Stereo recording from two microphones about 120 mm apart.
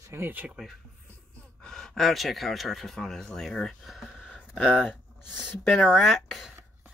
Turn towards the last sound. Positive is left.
turn(degrees=0)  # may be behind; listen again after turning